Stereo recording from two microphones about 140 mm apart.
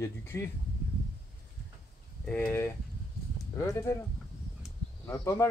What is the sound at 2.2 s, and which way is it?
Speech, 10° left (ahead or behind).